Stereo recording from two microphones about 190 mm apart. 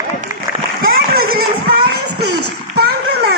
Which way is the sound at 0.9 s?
50° right (ahead or behind).